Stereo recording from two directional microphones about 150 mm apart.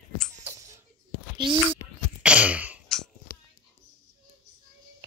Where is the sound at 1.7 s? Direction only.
10° right (ahead or behind).